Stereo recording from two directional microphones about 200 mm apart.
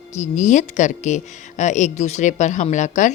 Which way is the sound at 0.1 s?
35° left (ahead or behind).